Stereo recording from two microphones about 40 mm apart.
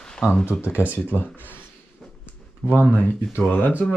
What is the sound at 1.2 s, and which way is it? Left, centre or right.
Speech, left.